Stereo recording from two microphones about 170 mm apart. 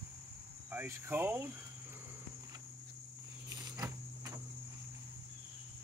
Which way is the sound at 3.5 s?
20° right (ahead or behind).